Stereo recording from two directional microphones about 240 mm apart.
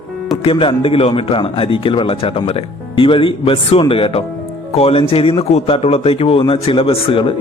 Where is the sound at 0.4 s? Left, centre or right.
Left.